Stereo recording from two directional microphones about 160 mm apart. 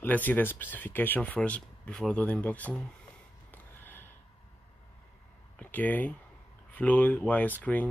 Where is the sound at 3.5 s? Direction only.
15° left (ahead or behind).